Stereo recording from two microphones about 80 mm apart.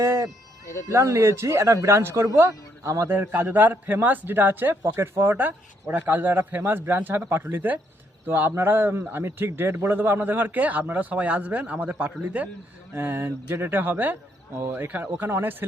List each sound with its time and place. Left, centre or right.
0.0 s a sound: right
0.9 s speech: right
2.5 s speech: right
3.1 s a man's voice: right
12.9 s a man's voice: right